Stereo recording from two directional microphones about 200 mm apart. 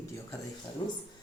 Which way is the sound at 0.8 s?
25° left (ahead or behind).